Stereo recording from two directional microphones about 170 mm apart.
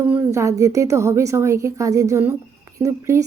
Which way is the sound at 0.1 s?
15° right (ahead or behind).